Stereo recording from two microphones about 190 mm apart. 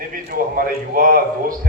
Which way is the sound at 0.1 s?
50° right (ahead or behind).